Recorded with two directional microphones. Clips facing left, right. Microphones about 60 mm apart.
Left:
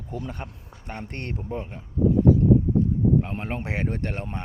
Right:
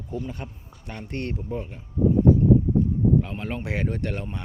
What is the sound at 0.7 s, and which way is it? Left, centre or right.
Speech, left.